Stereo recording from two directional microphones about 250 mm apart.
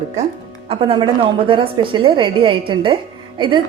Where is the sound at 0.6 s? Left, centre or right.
Right.